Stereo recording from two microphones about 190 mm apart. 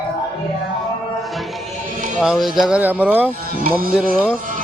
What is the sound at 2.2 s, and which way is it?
Speech, centre (ahead or behind).